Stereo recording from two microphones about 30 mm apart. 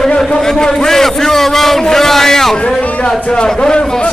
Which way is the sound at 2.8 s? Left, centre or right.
Left.